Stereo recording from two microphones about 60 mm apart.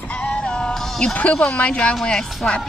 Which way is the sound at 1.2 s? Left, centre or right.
Left.